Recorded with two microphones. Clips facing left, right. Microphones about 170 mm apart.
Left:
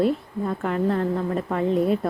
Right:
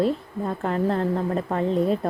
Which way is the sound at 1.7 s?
5° left (ahead or behind).